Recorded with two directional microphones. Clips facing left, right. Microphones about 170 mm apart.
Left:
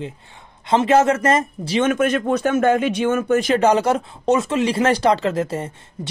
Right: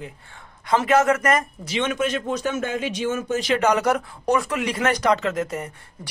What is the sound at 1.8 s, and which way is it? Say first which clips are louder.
Speech: left 6 dB; 50° left (ahead or behind).